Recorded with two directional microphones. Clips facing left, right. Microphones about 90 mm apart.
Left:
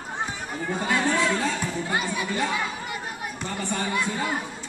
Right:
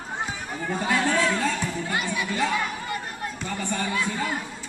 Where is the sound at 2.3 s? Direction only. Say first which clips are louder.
Right 3 dB; 20° left (ahead or behind).